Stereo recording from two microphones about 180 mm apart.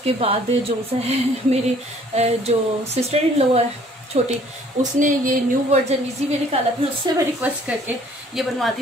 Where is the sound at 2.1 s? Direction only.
35° right (ahead or behind).